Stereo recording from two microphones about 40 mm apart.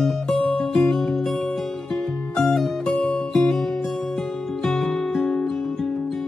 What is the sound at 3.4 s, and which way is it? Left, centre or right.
Music, centre.